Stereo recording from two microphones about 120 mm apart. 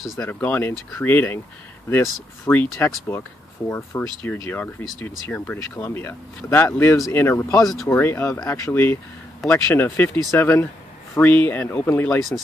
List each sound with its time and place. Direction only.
0.2 s speech: 15° left (ahead or behind)
2.4 s speech: 15° left (ahead or behind)